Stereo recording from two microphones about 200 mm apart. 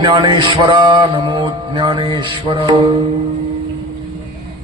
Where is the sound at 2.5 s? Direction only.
25° right (ahead or behind).